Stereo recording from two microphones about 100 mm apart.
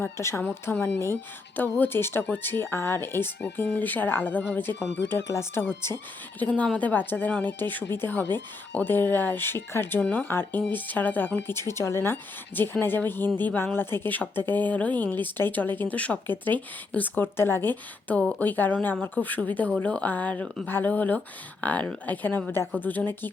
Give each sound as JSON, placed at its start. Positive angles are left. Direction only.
{"t": 0.0, "sound": "speech", "side_deg": 25}
{"t": 6.4, "sound": "speech", "side_deg": 10}
{"t": 18.2, "sound": "speech", "side_deg": 5}
{"t": 18.4, "sound": "speech", "side_deg": 20}